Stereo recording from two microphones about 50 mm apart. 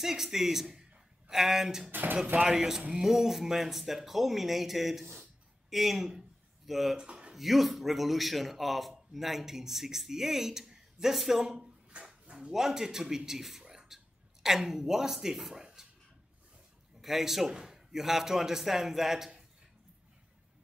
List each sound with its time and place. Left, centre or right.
0.0 s a man's voice: centre
1.9 s speech: right
2.4 s a man's voice: centre
5.2 s a sound: centre
7.0 s a sound: centre
7.3 s a man's voice: centre
12.3 s speech: centre
15.6 s a sound: centre
17.0 s a man's voice: centre